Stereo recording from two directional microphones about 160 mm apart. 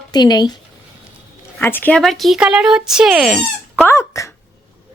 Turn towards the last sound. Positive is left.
turn(degrees=20)  # may be behind; listen again after turning